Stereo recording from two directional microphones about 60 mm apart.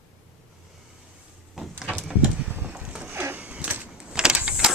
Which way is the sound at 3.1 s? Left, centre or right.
Right.